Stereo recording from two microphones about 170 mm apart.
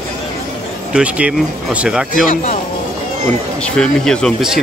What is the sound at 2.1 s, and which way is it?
Speech, 50° left (ahead or behind).